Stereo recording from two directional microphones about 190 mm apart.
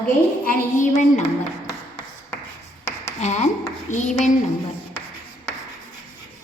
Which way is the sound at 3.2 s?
35° left (ahead or behind).